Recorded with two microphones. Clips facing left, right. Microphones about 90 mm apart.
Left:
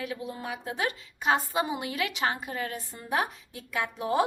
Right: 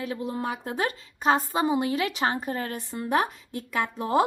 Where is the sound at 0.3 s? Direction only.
45° right (ahead or behind).